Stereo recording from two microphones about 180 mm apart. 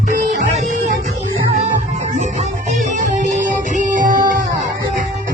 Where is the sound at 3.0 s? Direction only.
45° right (ahead or behind).